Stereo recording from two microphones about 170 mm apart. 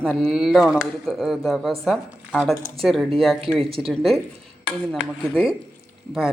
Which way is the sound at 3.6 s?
35° right (ahead or behind).